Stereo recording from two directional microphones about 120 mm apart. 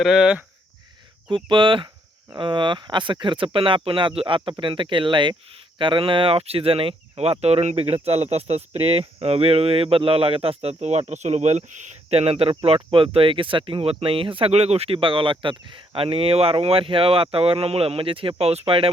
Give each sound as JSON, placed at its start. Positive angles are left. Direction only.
{"t": 0.0, "sound": "speech", "side_deg": 0}
{"t": 1.5, "sound": "speech", "side_deg": -45}